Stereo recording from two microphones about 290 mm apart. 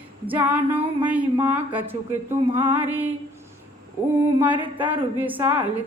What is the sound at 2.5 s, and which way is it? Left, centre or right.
Female singing, centre.